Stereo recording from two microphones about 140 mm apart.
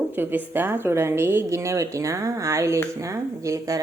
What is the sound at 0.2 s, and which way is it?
A woman's voice, 15° right (ahead or behind).